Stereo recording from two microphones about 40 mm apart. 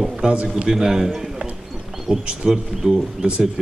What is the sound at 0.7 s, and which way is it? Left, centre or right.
Speech, centre.